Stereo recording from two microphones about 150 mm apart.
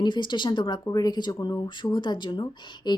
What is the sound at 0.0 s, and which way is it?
Speech, 30° left (ahead or behind).